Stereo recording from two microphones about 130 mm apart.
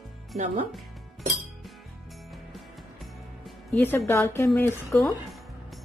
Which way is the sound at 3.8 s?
20° left (ahead or behind).